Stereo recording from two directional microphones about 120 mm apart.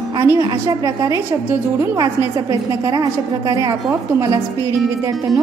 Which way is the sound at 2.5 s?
30° right (ahead or behind).